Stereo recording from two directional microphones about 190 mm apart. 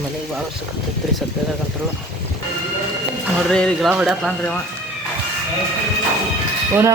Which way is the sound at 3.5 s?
5° left (ahead or behind).